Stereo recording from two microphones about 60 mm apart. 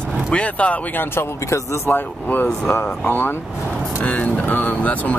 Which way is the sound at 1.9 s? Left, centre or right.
Left.